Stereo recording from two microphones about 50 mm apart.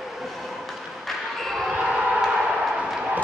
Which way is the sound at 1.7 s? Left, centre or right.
Centre.